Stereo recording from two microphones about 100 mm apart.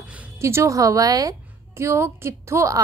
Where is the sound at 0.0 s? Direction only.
15° right (ahead or behind).